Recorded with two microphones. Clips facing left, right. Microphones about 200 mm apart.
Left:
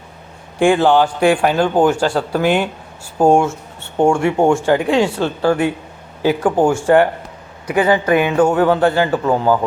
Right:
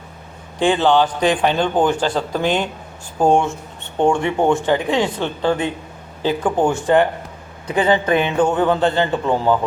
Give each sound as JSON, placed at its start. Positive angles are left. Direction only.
{"t": 0.6, "sound": "a man's voice", "side_deg": 10}
{"t": 6.2, "sound": "a man's voice", "side_deg": 10}
{"t": 7.7, "sound": "a woman's voice", "side_deg": -25}
{"t": 8.2, "sound": "a man's voice", "side_deg": 10}